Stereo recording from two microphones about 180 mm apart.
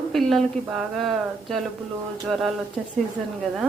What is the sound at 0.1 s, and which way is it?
Speech, centre (ahead or behind).